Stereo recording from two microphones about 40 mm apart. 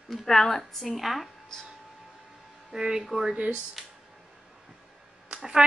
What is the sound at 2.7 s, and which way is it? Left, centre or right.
Speech, centre.